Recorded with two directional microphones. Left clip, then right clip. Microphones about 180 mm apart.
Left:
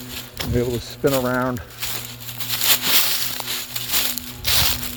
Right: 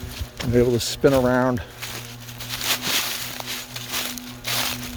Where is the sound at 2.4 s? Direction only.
55° left (ahead or behind).